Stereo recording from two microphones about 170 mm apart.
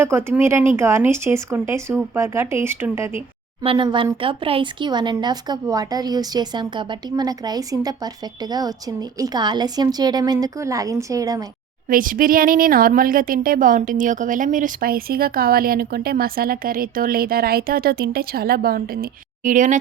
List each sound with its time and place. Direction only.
0.0 s speech: 15° right (ahead or behind)
3.6 s speech: 30° right (ahead or behind)
11.9 s speech: 55° right (ahead or behind)
19.5 s speech: 45° right (ahead or behind)